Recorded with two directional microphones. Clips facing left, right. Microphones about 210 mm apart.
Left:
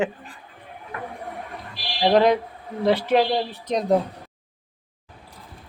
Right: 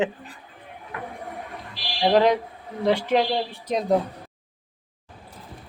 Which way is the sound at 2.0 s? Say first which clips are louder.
Left 1 dB; 10° left (ahead or behind).